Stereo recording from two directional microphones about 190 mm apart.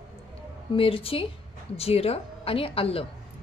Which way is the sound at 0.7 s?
30° left (ahead or behind).